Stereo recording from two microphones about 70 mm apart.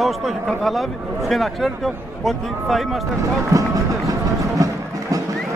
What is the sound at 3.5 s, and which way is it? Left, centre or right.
Run, right.